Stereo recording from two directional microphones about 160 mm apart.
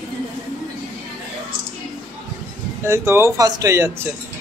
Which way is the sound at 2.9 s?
15° right (ahead or behind).